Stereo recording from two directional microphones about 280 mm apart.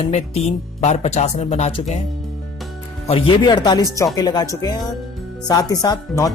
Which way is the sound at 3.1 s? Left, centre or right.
Centre.